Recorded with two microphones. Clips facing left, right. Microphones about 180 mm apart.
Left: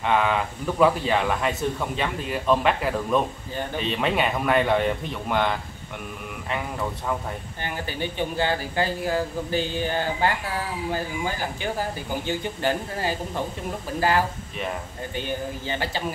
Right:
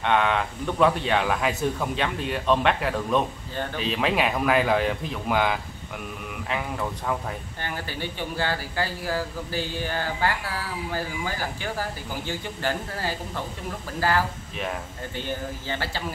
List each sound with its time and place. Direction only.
0.0 s speech: centre (ahead or behind)
7.6 s speech: 15° left (ahead or behind)